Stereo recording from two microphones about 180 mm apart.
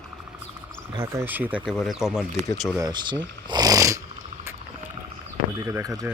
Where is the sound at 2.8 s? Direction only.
25° right (ahead or behind).